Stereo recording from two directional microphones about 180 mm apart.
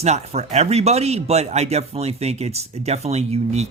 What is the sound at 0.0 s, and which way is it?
Speech, 35° right (ahead or behind).